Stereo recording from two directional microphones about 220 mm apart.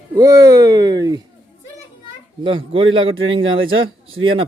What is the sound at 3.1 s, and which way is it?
Speech, 60° right (ahead or behind).